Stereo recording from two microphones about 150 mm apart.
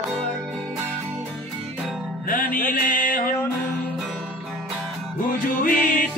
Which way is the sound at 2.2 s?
65° left (ahead or behind).